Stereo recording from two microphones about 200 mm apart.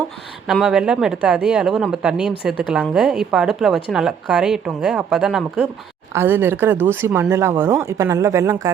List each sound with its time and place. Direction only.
0.4 s speech: centre (ahead or behind)